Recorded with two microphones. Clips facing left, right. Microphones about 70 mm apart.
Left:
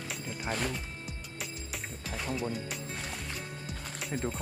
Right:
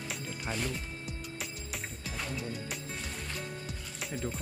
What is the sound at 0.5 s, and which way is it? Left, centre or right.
Speech, left.